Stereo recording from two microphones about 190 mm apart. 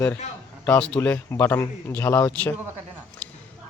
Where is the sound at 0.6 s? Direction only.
10° left (ahead or behind).